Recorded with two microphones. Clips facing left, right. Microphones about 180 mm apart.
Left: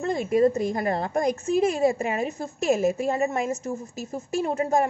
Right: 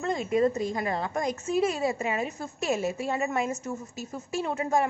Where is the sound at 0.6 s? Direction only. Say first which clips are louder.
Left 4 dB; 50° left (ahead or behind).